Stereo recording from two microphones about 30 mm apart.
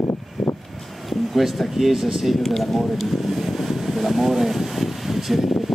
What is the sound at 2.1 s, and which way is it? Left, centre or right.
Air conditioning, centre.